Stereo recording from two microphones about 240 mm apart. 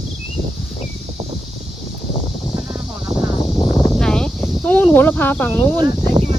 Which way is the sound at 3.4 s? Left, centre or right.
Left.